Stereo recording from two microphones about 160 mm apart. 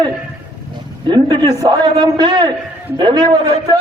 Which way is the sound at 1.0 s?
30° right (ahead or behind).